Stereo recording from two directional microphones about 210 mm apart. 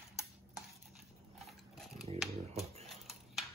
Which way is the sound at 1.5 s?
Centre (ahead or behind).